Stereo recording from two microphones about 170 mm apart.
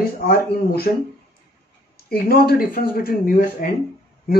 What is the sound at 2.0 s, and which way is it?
Speech, 60° left (ahead or behind).